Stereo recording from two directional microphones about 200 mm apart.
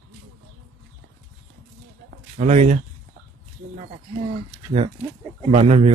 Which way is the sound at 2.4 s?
35° right (ahead or behind).